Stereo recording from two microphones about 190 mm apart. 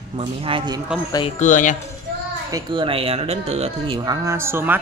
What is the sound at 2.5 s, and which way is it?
Speech, 25° right (ahead or behind).